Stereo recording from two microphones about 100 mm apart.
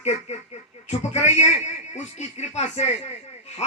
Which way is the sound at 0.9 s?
90° left.